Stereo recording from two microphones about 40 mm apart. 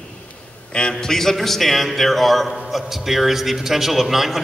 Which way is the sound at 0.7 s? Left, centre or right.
Left.